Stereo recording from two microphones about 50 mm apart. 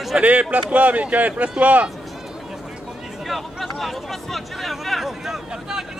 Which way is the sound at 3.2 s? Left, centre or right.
Centre.